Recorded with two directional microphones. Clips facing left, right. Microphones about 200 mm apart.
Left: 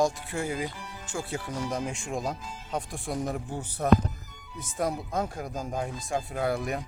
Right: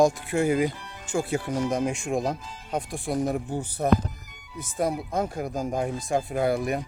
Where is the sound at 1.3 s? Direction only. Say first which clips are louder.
Right 4 dB; 15° right (ahead or behind).